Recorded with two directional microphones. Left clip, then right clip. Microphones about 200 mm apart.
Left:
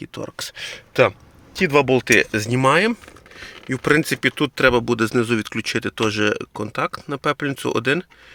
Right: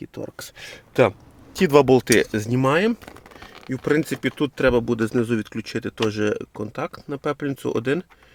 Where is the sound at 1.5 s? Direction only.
25° right (ahead or behind).